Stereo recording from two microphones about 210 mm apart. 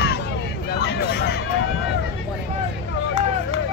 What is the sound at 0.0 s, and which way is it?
Hubbub, 55° left (ahead or behind).